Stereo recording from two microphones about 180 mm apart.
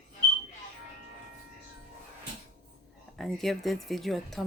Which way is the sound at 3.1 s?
Centre (ahead or behind).